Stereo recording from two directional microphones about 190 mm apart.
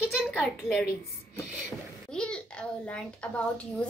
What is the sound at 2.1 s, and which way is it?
A child's voice, 5° left (ahead or behind).